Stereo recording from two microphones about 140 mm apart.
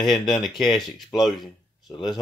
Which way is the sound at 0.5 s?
30° left (ahead or behind).